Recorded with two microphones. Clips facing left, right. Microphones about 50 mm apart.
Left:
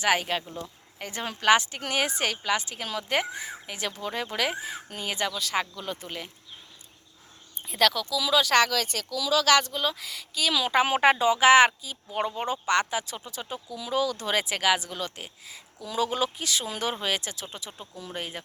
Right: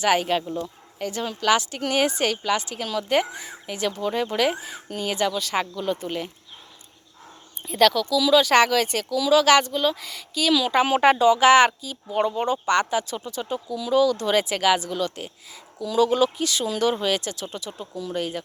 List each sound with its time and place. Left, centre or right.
0.0 s speech: centre
1.3 s a woman's voice: left
1.7 s a woman's voice: centre
4.9 s a woman's voice: centre
7.7 s speech: centre
8.5 s speech: right
9.6 s speech: centre
10.5 s a woman's voice: centre
16.6 s a woman's voice: centre